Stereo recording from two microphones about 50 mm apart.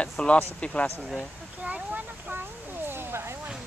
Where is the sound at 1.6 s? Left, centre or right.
Right.